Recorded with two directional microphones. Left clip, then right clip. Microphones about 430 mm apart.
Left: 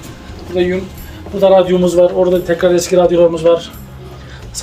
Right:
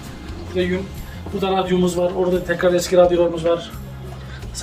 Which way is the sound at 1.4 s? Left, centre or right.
Centre.